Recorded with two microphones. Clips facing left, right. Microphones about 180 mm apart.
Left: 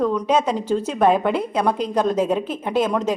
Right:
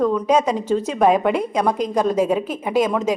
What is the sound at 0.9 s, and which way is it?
A woman's voice, centre (ahead or behind).